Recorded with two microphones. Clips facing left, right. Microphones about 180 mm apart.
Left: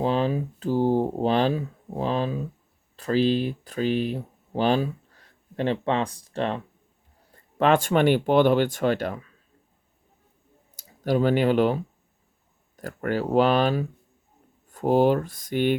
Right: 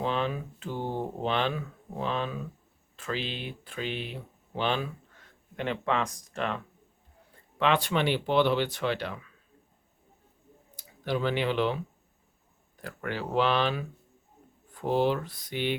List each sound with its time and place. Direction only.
0.0 s a sound: 35° left (ahead or behind)
2.9 s speech: 40° left (ahead or behind)
7.6 s speech: 45° left (ahead or behind)
10.8 s speech: 45° left (ahead or behind)